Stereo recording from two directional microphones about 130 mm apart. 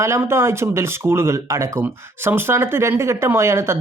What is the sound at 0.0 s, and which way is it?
Speech, 20° right (ahead or behind).